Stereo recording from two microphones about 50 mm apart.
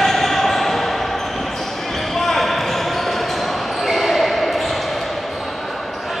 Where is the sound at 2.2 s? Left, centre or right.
Centre.